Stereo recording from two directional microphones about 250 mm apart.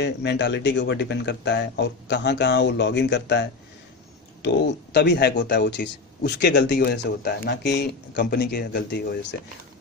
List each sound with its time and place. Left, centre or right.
0.0 s a man's voice: left